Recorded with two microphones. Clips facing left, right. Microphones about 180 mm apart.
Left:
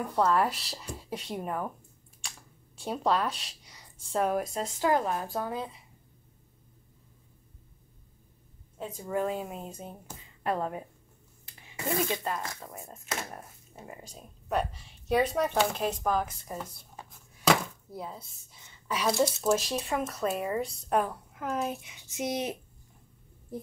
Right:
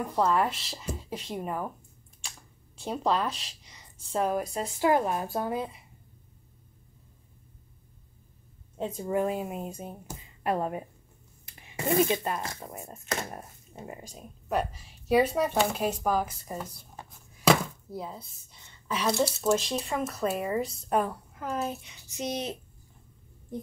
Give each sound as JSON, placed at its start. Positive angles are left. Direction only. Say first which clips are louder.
{"t": 0.1, "sound": "speech", "louder": "even", "side_deg": 0}
{"t": 2.8, "sound": "speech", "louder": "even", "side_deg": 0}
{"t": 4.7, "sound": "speech", "louder": "right 2 dB", "side_deg": -10}
{"t": 8.7, "sound": "a woman's voice", "louder": "right 6 dB", "side_deg": -25}
{"t": 9.1, "sound": "speech", "louder": "right 2 dB", "side_deg": -10}
{"t": 12.0, "sound": "speech", "louder": "right 5 dB", "side_deg": -20}
{"t": 13.3, "sound": "a sound", "louder": "right 2 dB", "side_deg": -25}
{"t": 14.0, "sound": "speech", "louder": "right 2 dB", "side_deg": -10}